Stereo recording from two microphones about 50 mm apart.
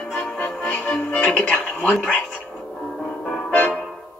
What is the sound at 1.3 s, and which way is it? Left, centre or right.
Television, left.